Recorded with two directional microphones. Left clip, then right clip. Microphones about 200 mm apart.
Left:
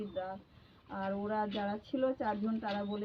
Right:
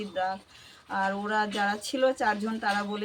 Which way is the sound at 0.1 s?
40° right (ahead or behind).